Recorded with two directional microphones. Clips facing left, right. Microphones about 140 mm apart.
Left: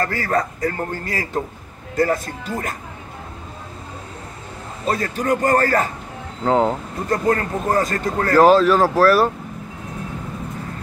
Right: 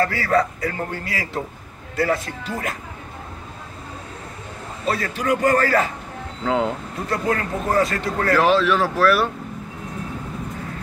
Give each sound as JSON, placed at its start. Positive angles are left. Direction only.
{"t": 0.0, "sound": "a man's voice", "side_deg": 45}
{"t": 4.8, "sound": "a man's voice", "side_deg": 40}